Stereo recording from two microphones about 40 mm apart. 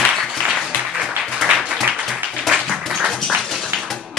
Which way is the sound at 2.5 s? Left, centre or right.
Centre.